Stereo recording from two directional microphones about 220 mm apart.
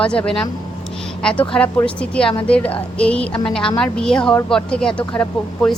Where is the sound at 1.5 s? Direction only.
5° left (ahead or behind).